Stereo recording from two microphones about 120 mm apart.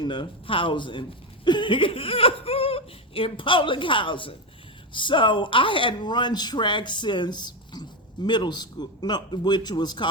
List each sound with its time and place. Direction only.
0.0 s speech: 40° left (ahead or behind)